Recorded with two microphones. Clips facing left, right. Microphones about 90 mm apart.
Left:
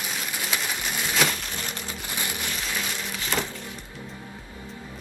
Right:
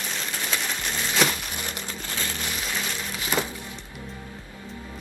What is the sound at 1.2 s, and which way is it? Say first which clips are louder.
Crumpling: right 2 dB; 5° right (ahead or behind).